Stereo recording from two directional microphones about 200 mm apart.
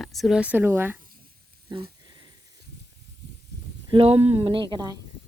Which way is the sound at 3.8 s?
25° right (ahead or behind).